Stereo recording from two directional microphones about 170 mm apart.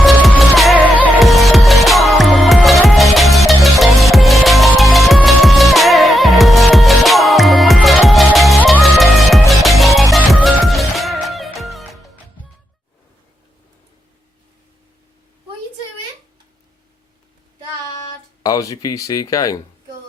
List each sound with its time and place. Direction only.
0.0 s music: centre (ahead or behind)
18.4 s speech: 20° left (ahead or behind)